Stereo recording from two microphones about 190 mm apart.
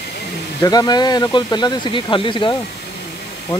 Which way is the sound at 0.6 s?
20° left (ahead or behind).